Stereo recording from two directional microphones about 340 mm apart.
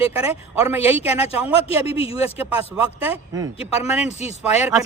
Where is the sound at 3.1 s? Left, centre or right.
Centre.